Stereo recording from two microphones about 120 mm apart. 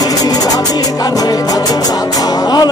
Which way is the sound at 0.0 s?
30° left (ahead or behind).